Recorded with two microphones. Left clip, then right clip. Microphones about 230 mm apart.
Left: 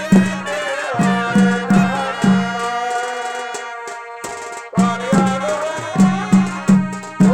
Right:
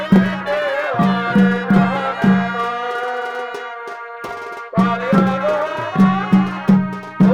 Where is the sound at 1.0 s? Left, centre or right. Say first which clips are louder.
Even; centre.